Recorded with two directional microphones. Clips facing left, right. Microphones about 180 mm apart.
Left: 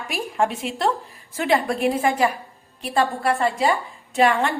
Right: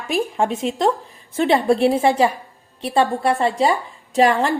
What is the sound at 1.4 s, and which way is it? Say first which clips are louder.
A woman's voice: right 5 dB; 30° right (ahead or behind).